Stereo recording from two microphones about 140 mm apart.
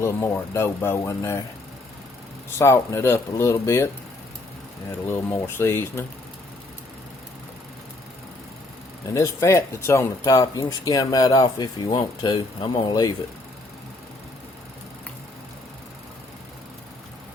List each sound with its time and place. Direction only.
0.0 s speech: 15° left (ahead or behind)
2.6 s speech: 20° left (ahead or behind)
5.0 s speech: 15° left (ahead or behind)
9.1 s speech: 20° left (ahead or behind)